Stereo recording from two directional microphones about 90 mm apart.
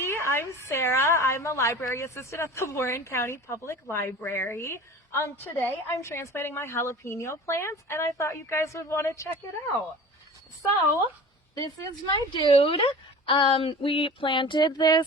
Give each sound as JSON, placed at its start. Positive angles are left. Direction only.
{"t": 0.0, "sound": "a woman's voice", "side_deg": 30}
{"t": 11.5, "sound": "speech", "side_deg": 45}
{"t": 12.3, "sound": "a woman's voice", "side_deg": 75}